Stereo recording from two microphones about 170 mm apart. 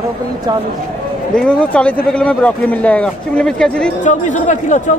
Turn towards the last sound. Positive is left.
turn(degrees=45)  # may be behind; listen again after turning